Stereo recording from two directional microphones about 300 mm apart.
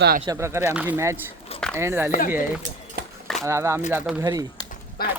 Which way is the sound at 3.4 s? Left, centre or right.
Centre.